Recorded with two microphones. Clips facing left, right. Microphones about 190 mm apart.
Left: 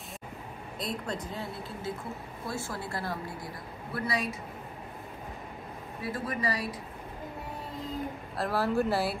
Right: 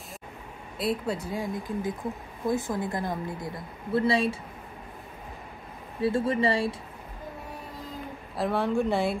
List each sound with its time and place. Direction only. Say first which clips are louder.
0.7 s a woman's voice: right 7 dB; 5° right (ahead or behind); by 4.4 s 30° right (ahead or behind)
5.9 s a woman's voice: right 9 dB; 25° right (ahead or behind)
8.4 s speech: right 2 dB; centre (ahead or behind)